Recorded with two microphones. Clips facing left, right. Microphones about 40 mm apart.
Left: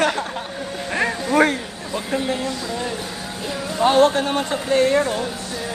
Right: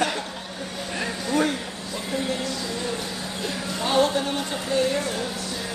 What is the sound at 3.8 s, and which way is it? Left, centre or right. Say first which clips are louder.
Speech: left 7 dB; left.